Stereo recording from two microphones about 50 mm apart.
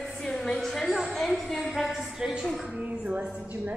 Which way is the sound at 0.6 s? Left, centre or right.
Centre.